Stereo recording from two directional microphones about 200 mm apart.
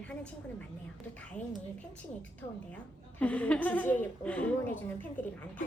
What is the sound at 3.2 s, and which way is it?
A woman's voice, 5° left (ahead or behind).